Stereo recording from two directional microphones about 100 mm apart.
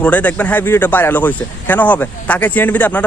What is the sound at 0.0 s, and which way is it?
Speech, 15° left (ahead or behind).